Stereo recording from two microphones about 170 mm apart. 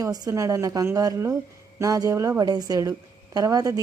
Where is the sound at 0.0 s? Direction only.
20° right (ahead or behind).